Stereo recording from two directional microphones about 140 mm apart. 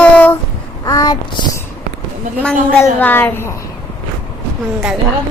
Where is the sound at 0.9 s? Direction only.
25° left (ahead or behind).